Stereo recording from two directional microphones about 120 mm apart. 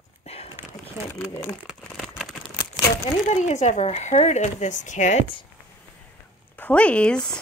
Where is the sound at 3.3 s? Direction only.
75° left (ahead or behind).